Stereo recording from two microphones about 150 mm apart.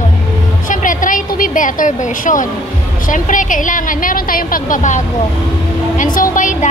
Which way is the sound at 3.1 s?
60° left (ahead or behind).